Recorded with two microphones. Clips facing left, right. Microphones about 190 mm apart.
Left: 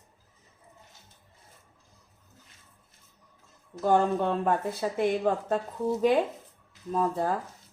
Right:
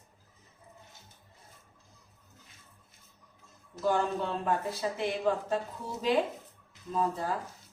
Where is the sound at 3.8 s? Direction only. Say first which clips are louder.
Left 5 dB; 50° left (ahead or behind).